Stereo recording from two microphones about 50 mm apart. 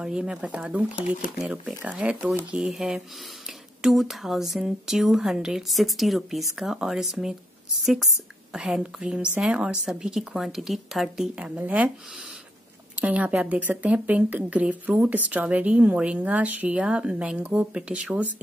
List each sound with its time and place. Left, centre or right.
0.0 s speech: centre
0.6 s speech: right
2.6 s a woman's voice: centre
8.8 s speech: right
11.5 s a woman's voice: right
12.9 s a woman's voice: right